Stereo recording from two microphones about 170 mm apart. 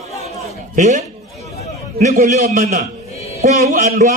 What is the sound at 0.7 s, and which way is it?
A man's voice, 45° right (ahead or behind).